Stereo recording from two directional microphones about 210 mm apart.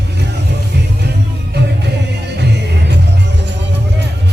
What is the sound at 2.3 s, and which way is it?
Music, 55° right (ahead or behind).